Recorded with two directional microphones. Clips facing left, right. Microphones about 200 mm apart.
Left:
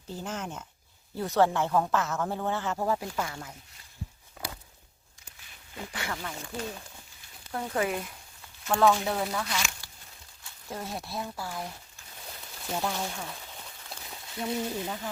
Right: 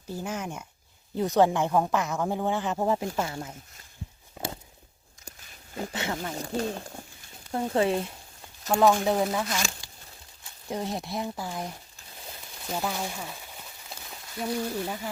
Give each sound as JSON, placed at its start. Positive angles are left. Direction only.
{"t": 0.1, "sound": "speech", "side_deg": -10}
{"t": 4.4, "sound": "a sound", "side_deg": -25}
{"t": 5.9, "sound": "speech", "side_deg": -25}
{"t": 6.3, "sound": "speech", "side_deg": -40}
{"t": 7.5, "sound": "speech", "side_deg": -25}
{"t": 9.8, "sound": "a sound", "side_deg": -15}
{"t": 10.7, "sound": "speech", "side_deg": -20}
{"t": 12.6, "sound": "a sound", "side_deg": -5}
{"t": 14.6, "sound": "speech", "side_deg": 10}
{"t": 14.8, "sound": "speech", "side_deg": -10}